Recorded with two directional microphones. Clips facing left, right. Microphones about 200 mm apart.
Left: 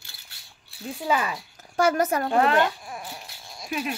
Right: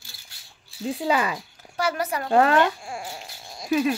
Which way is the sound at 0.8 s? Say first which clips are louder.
Right 3 dB; 25° right (ahead or behind).